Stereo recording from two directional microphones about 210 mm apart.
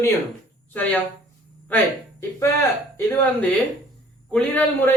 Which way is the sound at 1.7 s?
10° left (ahead or behind).